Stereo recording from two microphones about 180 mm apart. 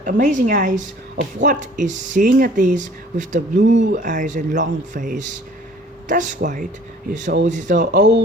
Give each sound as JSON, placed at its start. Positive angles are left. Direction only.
{"t": 0.0, "sound": "speech", "side_deg": -45}
{"t": 7.9, "sound": "speech", "side_deg": -75}